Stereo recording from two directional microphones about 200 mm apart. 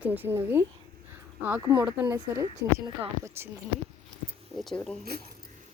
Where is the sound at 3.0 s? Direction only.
10° right (ahead or behind).